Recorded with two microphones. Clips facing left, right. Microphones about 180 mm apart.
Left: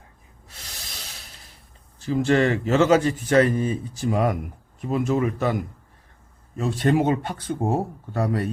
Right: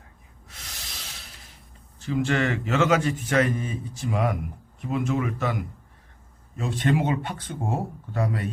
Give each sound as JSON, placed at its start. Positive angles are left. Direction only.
{"t": 0.4, "sound": "a sound", "side_deg": 35}
{"t": 2.0, "sound": "speech", "side_deg": 35}
{"t": 6.6, "sound": "speech", "side_deg": 40}